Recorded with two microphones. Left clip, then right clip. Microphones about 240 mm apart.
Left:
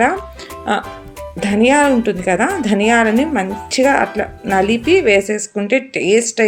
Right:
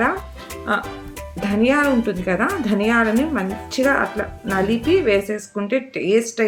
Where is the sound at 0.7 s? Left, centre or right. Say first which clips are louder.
Left 3 dB; centre.